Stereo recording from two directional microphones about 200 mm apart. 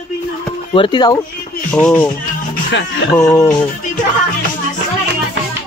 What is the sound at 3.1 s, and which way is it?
Speech, 15° left (ahead or behind).